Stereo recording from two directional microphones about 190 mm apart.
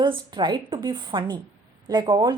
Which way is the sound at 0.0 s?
25° right (ahead or behind).